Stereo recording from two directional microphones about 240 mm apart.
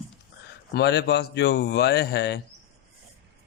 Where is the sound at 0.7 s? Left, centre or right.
Left.